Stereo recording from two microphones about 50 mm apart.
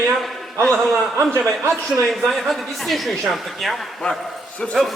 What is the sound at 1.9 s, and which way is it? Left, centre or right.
A woman's voice, centre.